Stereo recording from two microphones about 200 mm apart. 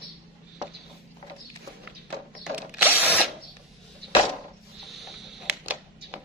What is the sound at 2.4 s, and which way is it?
Drill, 5° right (ahead or behind).